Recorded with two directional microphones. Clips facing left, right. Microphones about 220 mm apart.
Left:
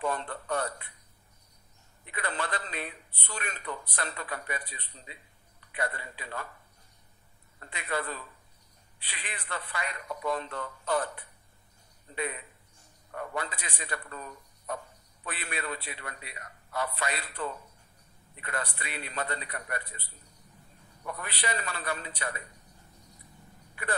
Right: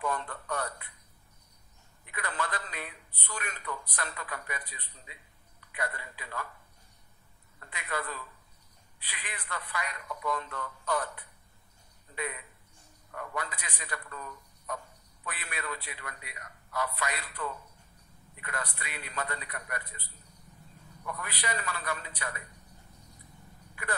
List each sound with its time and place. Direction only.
0.0 s a man's voice: 30° left (ahead or behind)
2.0 s a man's voice: 25° left (ahead or behind)
7.6 s a man's voice: 25° left (ahead or behind)
12.2 s a man's voice: 25° left (ahead or behind)
21.0 s a man's voice: 30° left (ahead or behind)
23.7 s a sound: 30° left (ahead or behind)